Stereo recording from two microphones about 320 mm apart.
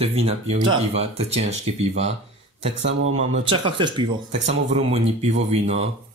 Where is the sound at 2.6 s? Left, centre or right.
Right.